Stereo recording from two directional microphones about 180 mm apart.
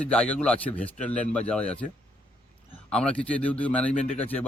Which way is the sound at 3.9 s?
40° left (ahead or behind).